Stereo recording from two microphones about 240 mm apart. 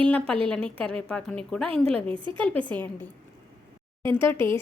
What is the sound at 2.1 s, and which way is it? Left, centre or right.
Speech, centre.